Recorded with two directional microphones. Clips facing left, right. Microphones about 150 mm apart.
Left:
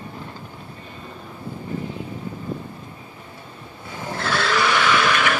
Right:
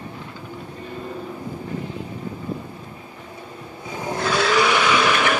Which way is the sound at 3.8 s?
15° right (ahead or behind).